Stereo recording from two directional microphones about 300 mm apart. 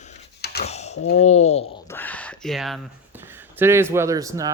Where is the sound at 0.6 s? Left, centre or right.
Left.